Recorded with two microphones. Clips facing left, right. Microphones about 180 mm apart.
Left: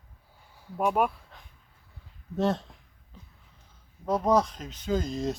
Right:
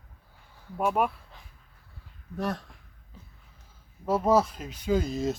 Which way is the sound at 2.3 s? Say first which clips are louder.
Left 5 dB; 25° left (ahead or behind).